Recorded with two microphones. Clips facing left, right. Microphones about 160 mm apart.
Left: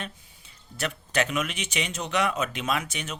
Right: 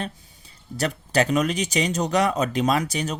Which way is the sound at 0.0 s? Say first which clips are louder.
Right 6 dB; 35° right (ahead or behind).